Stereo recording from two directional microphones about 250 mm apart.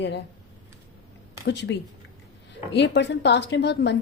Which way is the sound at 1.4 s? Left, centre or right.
Left.